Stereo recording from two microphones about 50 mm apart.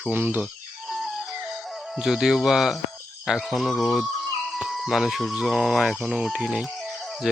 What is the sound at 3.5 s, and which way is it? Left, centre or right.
Speech, centre.